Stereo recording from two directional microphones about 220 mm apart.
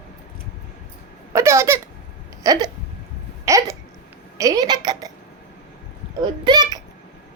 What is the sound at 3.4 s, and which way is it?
Hiccup, 15° right (ahead or behind).